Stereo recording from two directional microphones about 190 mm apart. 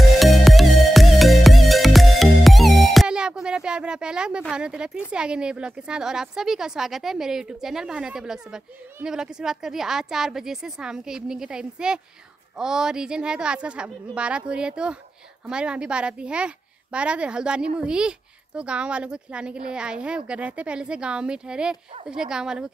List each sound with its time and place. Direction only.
0.0 s music: centre (ahead or behind)
5.1 s a woman's voice: 5° right (ahead or behind)